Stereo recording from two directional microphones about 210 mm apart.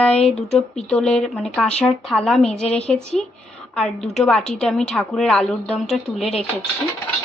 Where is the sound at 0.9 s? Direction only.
5° left (ahead or behind).